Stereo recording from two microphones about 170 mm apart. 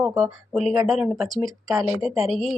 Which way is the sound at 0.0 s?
5° right (ahead or behind).